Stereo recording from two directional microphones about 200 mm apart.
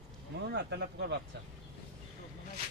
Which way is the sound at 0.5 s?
55° right (ahead or behind).